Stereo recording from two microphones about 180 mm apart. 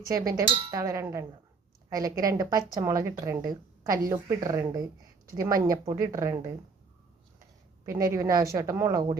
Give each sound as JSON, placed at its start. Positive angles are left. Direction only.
{"t": 0.1, "sound": "dishes", "side_deg": -20}
{"t": 2.7, "sound": "speech", "side_deg": -20}
{"t": 3.8, "sound": "dishes", "side_deg": -15}
{"t": 5.4, "sound": "speech", "side_deg": -20}
{"t": 8.1, "sound": "speech", "side_deg": -15}